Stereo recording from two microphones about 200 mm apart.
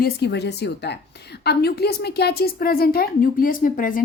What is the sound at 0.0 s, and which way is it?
A woman's voice, 55° left (ahead or behind).